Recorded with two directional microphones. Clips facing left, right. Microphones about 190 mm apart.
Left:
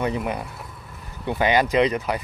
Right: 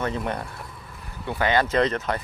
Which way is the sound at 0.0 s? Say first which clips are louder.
Left 2 dB; 10° left (ahead or behind).